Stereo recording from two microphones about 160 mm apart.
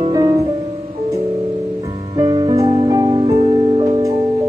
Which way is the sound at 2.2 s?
30° right (ahead or behind).